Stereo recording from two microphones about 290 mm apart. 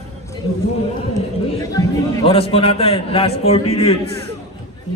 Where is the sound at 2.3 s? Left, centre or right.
Centre.